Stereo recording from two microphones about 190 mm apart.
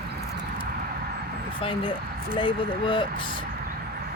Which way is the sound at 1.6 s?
25° left (ahead or behind).